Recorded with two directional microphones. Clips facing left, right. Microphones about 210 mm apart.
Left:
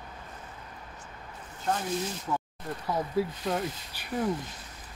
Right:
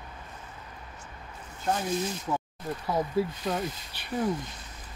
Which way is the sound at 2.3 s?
15° right (ahead or behind).